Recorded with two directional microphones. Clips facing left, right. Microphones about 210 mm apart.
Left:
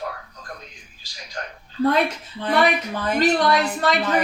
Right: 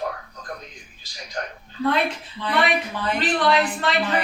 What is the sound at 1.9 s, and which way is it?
A woman's voice, 45° left (ahead or behind).